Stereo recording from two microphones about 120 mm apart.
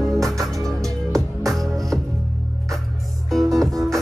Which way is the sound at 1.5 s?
Centre (ahead or behind).